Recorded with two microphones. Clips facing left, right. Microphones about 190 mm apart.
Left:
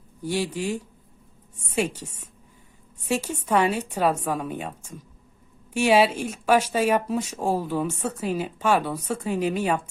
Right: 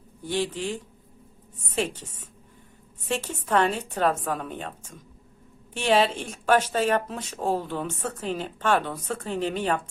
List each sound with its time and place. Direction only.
0.2 s speech: 10° left (ahead or behind)